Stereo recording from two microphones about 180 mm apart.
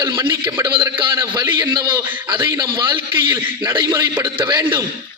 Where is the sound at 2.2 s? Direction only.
25° right (ahead or behind).